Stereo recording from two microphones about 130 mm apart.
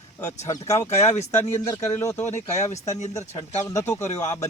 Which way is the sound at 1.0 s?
60° left (ahead or behind).